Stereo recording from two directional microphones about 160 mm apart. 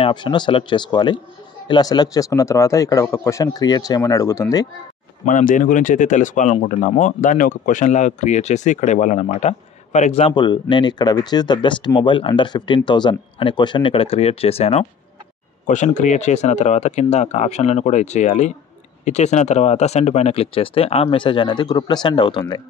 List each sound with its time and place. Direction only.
0.0 s speech: 30° left (ahead or behind)
5.2 s speech: 55° left (ahead or behind); by 14.9 s 40° left (ahead or behind)
15.6 s speech: 50° left (ahead or behind); by 22.6 s 25° left (ahead or behind)